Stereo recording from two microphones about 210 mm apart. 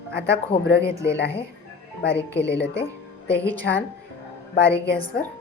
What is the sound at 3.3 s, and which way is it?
Speech, 10° left (ahead or behind).